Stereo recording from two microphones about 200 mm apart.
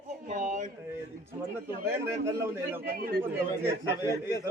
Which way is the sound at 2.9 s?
50° right (ahead or behind).